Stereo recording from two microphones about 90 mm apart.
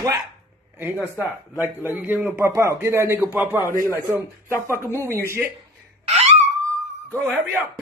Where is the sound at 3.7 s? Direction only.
30° left (ahead or behind).